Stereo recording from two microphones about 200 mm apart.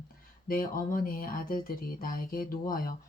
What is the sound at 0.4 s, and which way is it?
Speech, 45° left (ahead or behind).